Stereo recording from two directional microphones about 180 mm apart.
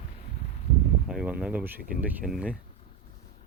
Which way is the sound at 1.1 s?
5° right (ahead or behind).